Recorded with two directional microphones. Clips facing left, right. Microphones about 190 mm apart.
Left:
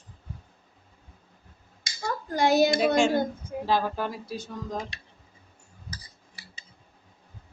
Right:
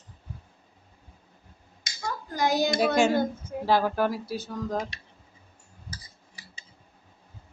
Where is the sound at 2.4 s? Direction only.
25° left (ahead or behind).